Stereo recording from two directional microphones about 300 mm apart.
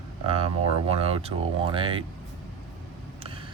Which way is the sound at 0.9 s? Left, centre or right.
Centre.